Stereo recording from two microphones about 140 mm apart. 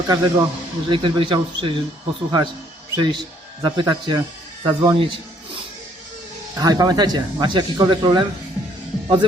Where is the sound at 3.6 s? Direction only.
35° right (ahead or behind).